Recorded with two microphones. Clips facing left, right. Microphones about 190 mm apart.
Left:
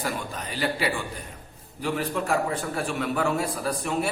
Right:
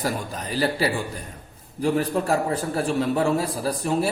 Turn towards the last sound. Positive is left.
turn(degrees=-35)  # may be behind; listen again after turning